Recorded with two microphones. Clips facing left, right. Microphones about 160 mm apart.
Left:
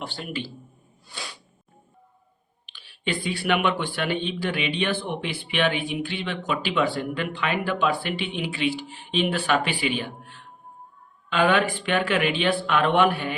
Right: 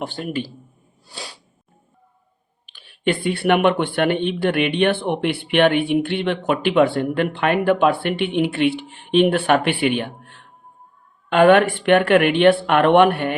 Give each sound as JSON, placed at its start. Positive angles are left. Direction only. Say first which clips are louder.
{"t": 0.0, "sound": "speech", "louder": "right 7 dB", "side_deg": -50}
{"t": 1.0, "sound": "sneeze", "louder": "right 3 dB", "side_deg": -35}
{"t": 2.6, "sound": "speech", "louder": "right 8 dB", "side_deg": -50}